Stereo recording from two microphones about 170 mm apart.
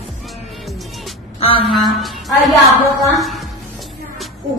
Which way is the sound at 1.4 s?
35° left (ahead or behind).